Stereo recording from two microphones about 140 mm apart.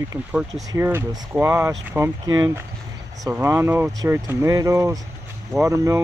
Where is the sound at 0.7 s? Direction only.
15° right (ahead or behind).